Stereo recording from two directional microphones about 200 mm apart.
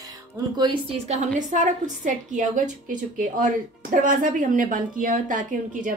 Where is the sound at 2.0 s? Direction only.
40° right (ahead or behind).